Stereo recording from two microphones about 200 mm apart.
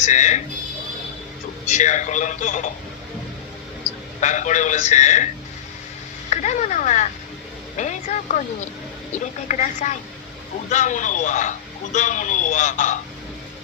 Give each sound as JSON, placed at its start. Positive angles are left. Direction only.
{"t": 0.0, "sound": "a man's voice", "side_deg": 35}
{"t": 1.7, "sound": "a man's voice", "side_deg": 35}
{"t": 4.2, "sound": "a man's voice", "side_deg": 40}
{"t": 6.3, "sound": "a man's voice", "side_deg": 35}